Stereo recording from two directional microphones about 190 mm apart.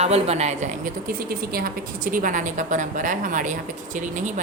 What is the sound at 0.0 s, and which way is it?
A woman's voice, 35° right (ahead or behind).